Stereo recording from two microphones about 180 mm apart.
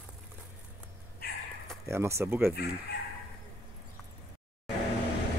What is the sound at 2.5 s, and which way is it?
Speech, 60° left (ahead or behind).